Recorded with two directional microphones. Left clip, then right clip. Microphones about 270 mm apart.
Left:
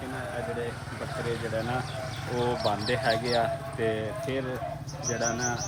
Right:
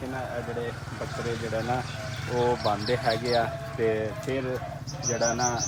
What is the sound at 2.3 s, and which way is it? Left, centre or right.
Speech, centre.